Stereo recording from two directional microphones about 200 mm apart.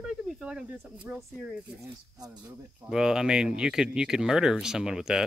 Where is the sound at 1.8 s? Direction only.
15° right (ahead or behind).